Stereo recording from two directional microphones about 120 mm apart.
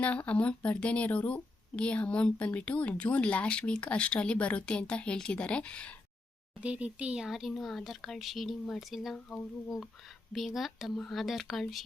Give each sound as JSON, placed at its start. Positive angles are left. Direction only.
{"t": 0.0, "sound": "a woman's voice", "side_deg": 10}
{"t": 6.6, "sound": "speech", "side_deg": -10}
{"t": 10.3, "sound": "speech", "side_deg": 0}